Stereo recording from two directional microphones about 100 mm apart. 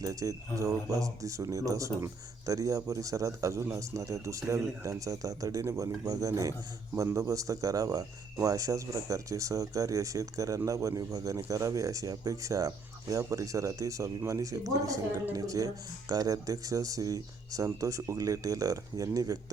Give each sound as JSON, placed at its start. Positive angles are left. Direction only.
{"t": 0.0, "sound": "speech", "side_deg": -35}